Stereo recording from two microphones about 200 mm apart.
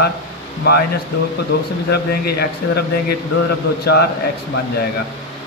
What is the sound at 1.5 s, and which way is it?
A man's voice, 55° left (ahead or behind).